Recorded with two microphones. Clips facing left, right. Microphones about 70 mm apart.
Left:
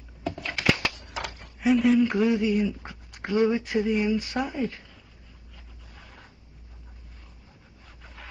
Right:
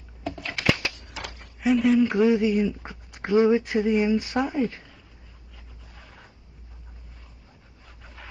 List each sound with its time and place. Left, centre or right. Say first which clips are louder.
0.2 s a sound: left 1 dB; centre
1.6 s speech: right 1 dB; centre
2.9 s a sound: right 2 dB; centre
3.3 s speech: right 4 dB; centre
5.9 s zipper: even; centre
8.0 s zipper: right 1 dB; centre